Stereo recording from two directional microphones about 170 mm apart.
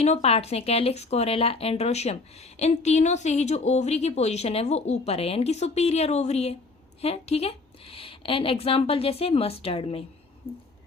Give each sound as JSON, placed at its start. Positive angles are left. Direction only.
{"t": 0.0, "sound": "speech", "side_deg": 40}